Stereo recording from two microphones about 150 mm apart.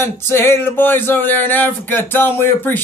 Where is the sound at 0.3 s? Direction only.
15° left (ahead or behind).